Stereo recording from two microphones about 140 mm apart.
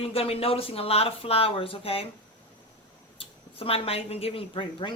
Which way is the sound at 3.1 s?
40° left (ahead or behind).